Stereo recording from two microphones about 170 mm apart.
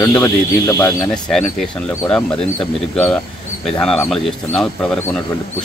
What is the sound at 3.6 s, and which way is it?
Speech, 5° left (ahead or behind).